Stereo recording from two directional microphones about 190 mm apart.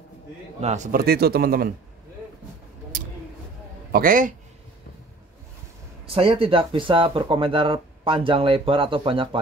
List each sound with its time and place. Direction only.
0.6 s a man's voice: 35° right (ahead or behind)
0.9 s speech: 55° right (ahead or behind)
2.9 s a sound: 45° right (ahead or behind)
3.9 s speech: 45° right (ahead or behind)
6.0 s speech: 30° right (ahead or behind)